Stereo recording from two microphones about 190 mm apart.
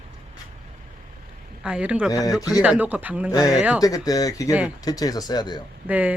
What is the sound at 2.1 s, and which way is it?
Speech, 20° left (ahead or behind).